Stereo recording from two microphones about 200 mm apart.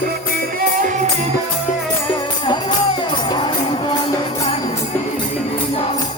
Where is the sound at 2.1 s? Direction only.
20° left (ahead or behind).